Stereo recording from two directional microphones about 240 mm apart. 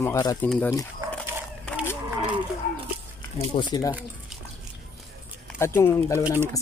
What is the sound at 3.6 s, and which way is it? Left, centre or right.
Speech, centre.